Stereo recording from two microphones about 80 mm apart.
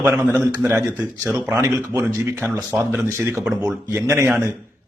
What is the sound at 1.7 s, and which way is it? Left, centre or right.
Speech, right.